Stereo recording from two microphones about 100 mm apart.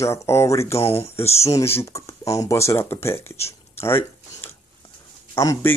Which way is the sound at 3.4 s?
25° left (ahead or behind).